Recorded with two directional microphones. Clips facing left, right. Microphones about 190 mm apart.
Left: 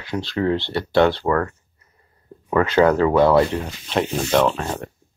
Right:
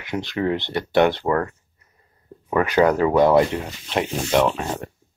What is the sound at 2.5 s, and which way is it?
Speech, 15° right (ahead or behind).